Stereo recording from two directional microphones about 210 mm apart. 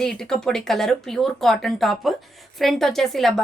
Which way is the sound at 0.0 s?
Centre (ahead or behind).